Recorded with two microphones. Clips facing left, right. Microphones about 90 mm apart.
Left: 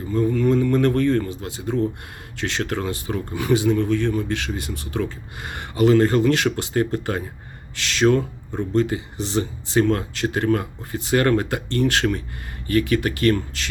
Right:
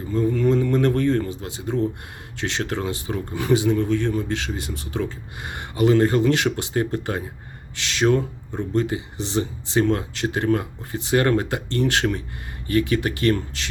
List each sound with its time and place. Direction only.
0.1 s speech: 20° right (ahead or behind)